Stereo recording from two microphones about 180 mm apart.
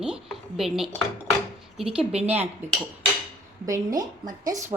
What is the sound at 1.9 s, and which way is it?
Speech, 5° right (ahead or behind).